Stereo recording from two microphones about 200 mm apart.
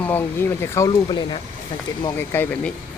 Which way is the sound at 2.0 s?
10° left (ahead or behind).